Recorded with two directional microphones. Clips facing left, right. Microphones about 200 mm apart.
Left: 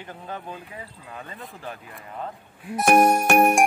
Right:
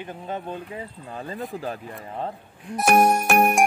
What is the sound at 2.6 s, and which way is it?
Speech, centre (ahead or behind).